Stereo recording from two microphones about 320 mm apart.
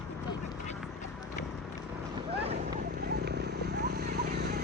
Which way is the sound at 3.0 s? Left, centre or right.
Right.